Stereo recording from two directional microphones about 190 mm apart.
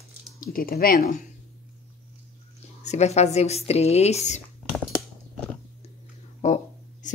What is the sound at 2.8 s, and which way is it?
Speech, 35° left (ahead or behind).